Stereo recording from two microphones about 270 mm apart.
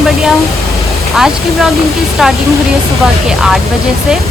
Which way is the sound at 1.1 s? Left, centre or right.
Centre.